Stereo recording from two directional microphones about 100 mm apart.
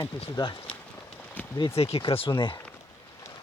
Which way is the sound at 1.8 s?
85° left.